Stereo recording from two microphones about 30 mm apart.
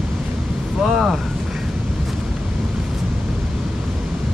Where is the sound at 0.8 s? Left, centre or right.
Centre.